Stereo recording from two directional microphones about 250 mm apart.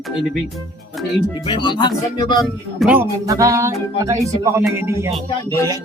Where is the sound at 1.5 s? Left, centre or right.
Centre.